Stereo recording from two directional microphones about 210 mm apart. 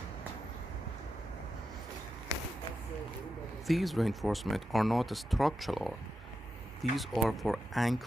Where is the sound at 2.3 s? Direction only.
20° right (ahead or behind).